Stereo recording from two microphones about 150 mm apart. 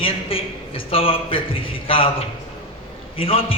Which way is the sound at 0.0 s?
40° left (ahead or behind).